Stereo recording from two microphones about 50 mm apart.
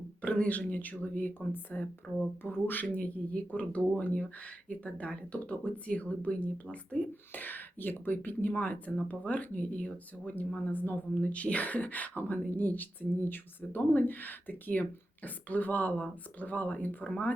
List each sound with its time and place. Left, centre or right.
0.2 s speech: left
2.8 s speech: left
7.3 s speech: left